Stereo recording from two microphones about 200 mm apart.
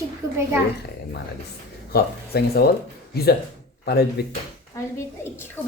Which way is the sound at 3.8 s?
55° left (ahead or behind).